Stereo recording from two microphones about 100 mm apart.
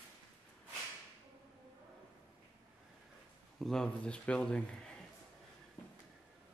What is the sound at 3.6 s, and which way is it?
Speech, 5° left (ahead or behind).